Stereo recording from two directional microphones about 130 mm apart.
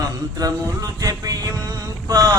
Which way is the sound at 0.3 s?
30° right (ahead or behind).